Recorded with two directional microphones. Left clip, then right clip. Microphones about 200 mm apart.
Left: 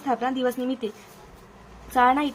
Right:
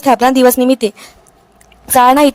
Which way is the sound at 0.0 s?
55° right (ahead or behind).